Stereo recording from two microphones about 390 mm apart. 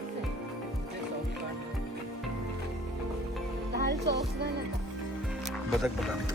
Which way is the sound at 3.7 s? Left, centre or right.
Right.